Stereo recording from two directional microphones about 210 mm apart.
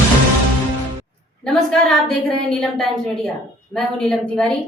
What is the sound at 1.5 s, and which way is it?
A woman's voice, centre (ahead or behind).